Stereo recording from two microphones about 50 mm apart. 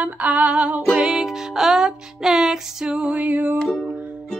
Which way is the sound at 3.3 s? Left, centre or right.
Right.